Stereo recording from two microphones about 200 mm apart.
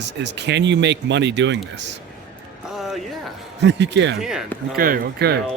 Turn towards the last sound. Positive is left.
turn(degrees=-50)  # may be behind; listen again after turning